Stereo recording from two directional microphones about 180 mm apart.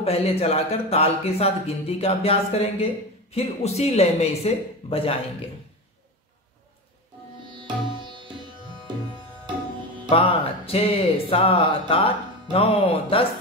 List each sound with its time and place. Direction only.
0.0 s speech: 35° left (ahead or behind)
7.5 s music: 25° right (ahead or behind)
10.0 s speech: 30° left (ahead or behind)